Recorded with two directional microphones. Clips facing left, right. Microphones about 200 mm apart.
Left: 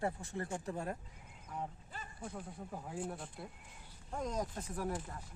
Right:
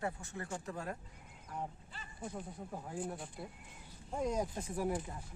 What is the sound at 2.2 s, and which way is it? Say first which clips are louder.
Speech: right 3 dB; 5° right (ahead or behind).